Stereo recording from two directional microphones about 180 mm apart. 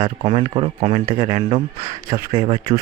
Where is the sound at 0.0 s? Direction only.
35° right (ahead or behind).